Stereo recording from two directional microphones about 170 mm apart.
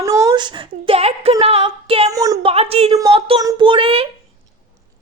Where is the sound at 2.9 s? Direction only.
20° right (ahead or behind).